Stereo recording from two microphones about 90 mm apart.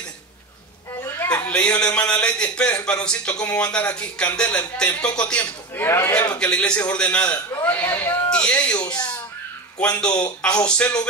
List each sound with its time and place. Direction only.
1.0 s a sound: 25° left (ahead or behind)
1.5 s a man's voice: 10° left (ahead or behind)
5.9 s a man's voice: 30° left (ahead or behind)
6.3 s a man's voice: 10° left (ahead or behind)